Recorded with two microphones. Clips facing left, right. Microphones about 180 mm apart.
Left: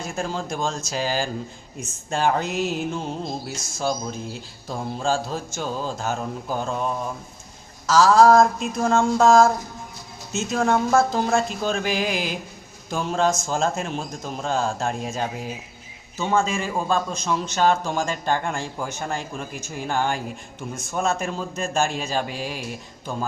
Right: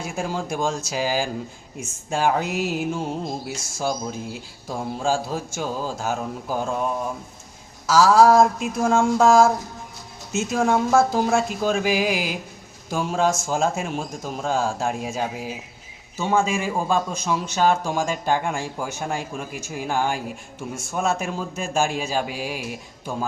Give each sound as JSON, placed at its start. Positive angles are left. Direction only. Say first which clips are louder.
{"t": 0.0, "sound": "a man's voice", "louder": "right 1 dB", "side_deg": -10}